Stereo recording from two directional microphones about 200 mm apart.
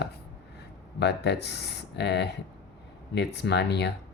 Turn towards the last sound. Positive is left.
turn(degrees=55)  # may be behind; listen again after turning